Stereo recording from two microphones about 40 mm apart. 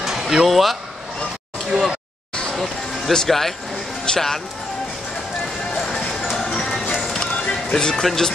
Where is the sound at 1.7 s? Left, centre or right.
Right.